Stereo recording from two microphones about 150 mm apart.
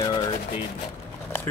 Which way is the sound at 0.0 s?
30° left (ahead or behind).